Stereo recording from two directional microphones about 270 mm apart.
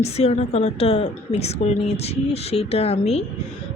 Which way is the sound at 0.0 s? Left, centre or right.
Left.